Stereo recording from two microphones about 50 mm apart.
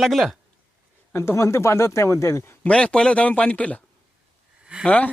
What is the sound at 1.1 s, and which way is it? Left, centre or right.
Speech, left.